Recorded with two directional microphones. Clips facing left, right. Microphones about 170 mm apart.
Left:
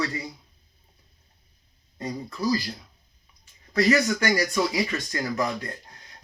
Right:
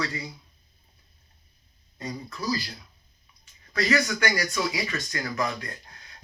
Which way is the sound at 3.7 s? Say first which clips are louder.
Left 4 dB; 25° left (ahead or behind).